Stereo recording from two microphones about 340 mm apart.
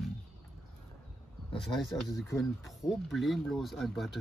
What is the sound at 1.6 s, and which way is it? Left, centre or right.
Speech, centre.